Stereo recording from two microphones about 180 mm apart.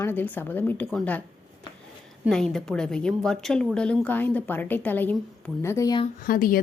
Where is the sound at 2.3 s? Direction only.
5° left (ahead or behind); by 6.0 s 20° left (ahead or behind).